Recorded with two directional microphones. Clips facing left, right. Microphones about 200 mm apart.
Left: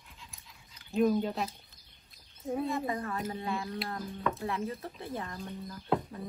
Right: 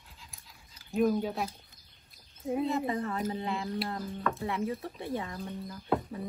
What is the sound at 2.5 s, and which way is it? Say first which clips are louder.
Speech: right 2 dB; 20° right (ahead or behind).